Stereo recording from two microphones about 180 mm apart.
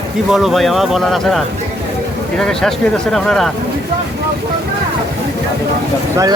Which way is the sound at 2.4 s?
Centre (ahead or behind).